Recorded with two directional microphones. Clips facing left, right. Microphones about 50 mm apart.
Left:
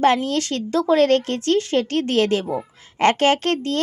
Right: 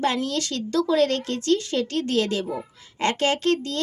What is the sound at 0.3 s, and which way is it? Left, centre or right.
A woman's voice, left.